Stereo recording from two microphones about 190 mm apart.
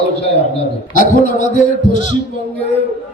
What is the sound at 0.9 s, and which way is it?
Speech, 45° left (ahead or behind).